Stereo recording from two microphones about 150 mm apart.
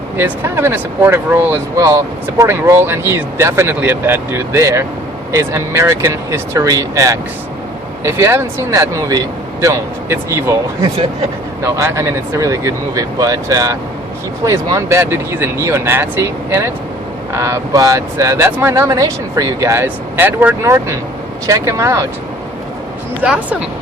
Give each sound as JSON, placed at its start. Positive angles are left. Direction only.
{"t": 0.2, "sound": "speech", "side_deg": -15}
{"t": 11.6, "sound": "speech", "side_deg": -20}
{"t": 23.2, "sound": "speech", "side_deg": -5}